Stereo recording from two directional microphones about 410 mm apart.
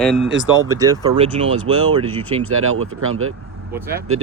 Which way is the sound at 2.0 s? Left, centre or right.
Right.